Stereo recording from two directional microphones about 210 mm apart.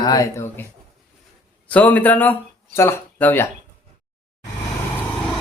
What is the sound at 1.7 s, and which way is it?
Speech, 5° left (ahead or behind).